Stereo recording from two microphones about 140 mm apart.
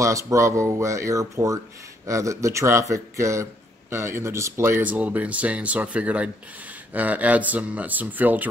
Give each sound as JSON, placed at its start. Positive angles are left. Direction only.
{"t": 0.0, "sound": "speech", "side_deg": -20}